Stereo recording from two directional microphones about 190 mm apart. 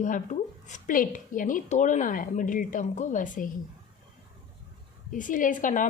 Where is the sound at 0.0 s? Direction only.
40° left (ahead or behind).